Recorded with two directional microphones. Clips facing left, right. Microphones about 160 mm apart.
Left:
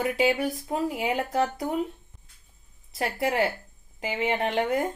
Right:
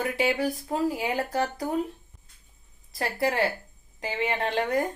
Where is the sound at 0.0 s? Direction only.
25° left (ahead or behind).